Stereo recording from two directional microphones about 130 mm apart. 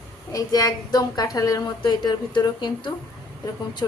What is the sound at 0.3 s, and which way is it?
A woman's voice, 30° left (ahead or behind).